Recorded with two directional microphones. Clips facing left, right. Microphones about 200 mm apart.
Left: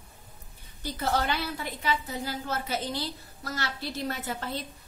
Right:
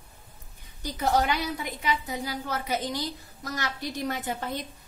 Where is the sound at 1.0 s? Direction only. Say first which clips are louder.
Right 3 dB; 15° right (ahead or behind).